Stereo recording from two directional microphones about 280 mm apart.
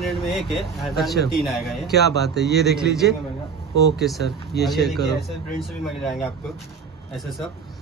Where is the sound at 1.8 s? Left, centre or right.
Left.